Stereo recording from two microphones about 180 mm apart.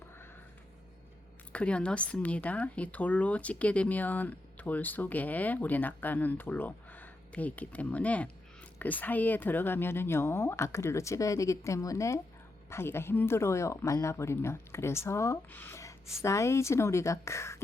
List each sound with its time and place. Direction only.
1.5 s speech: 5° left (ahead or behind)